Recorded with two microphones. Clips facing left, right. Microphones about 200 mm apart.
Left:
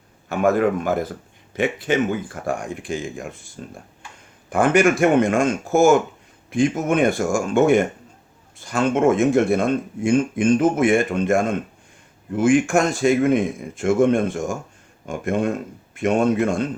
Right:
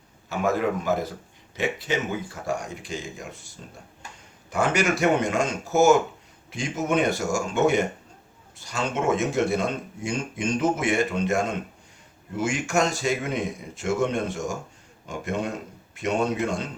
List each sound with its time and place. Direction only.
0.3 s speech: 55° left (ahead or behind)